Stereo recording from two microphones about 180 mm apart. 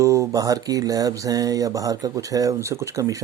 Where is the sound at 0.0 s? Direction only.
15° right (ahead or behind).